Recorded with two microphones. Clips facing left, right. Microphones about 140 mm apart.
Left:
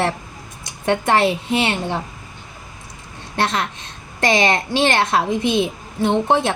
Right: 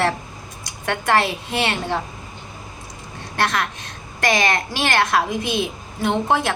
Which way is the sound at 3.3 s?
25° left (ahead or behind).